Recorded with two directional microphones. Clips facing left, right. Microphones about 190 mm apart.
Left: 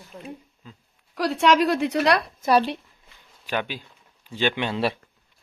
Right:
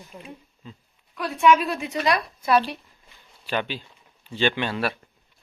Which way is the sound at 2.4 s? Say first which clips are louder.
Even; 40° left (ahead or behind).